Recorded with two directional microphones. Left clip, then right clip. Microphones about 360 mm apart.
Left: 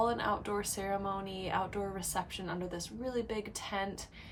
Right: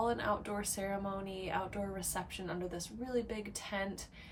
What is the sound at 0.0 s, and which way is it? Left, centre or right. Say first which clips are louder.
Speech: left 2 dB; centre.